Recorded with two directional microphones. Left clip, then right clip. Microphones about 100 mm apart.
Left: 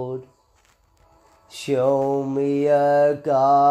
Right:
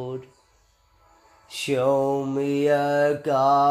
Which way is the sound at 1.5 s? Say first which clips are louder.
Left 2 dB; 25° left (ahead or behind).